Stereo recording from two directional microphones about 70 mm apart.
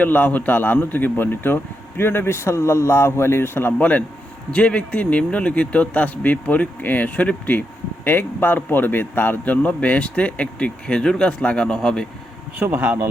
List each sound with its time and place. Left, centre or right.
0.0 s a man's voice: left
12.7 s speech: right